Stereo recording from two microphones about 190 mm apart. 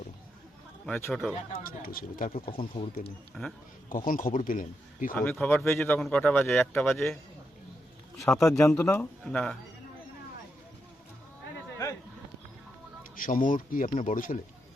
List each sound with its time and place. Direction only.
0.9 s speech: 5° left (ahead or behind)
1.6 s a man's voice: 50° left (ahead or behind)
2.6 s speech: 30° left (ahead or behind)
3.4 s speech: centre (ahead or behind)
3.8 s a man's voice: 45° left (ahead or behind)
5.1 s speech: 10° left (ahead or behind)
8.4 s speech: 15° left (ahead or behind)
13.1 s a man's voice: 45° left (ahead or behind)